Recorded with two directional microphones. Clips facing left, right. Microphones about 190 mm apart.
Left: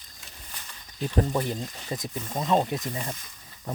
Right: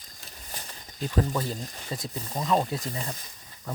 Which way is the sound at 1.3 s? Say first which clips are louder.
Left 3 dB; 20° left (ahead or behind).